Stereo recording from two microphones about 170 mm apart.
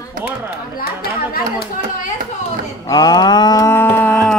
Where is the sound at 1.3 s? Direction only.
65° left (ahead or behind).